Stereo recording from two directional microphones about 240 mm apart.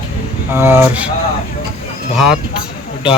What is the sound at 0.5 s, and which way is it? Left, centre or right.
Speech, centre.